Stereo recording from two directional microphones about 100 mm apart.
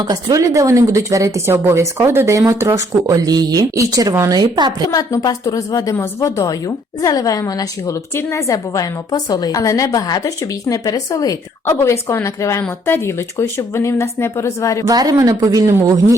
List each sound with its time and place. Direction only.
0.0 s a woman's voice: 40° right (ahead or behind)
4.9 s a woman's voice: 40° left (ahead or behind)
11.7 s speech: 25° left (ahead or behind)
14.8 s a woman's voice: 35° right (ahead or behind)